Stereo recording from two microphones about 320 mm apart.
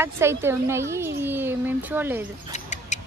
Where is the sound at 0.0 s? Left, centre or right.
Centre.